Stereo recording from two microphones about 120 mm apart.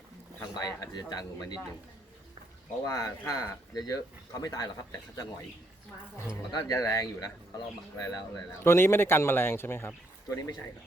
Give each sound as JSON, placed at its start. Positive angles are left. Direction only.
{"t": 0.3, "sound": "speech", "side_deg": 30}
{"t": 2.8, "sound": "speech", "side_deg": 30}
{"t": 6.5, "sound": "speech", "side_deg": 30}
{"t": 8.6, "sound": "speech", "side_deg": 20}